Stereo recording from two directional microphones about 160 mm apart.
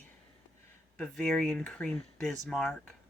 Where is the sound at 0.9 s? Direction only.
5° left (ahead or behind).